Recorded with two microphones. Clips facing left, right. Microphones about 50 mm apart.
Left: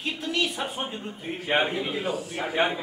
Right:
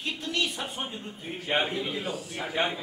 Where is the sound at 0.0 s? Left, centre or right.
Centre.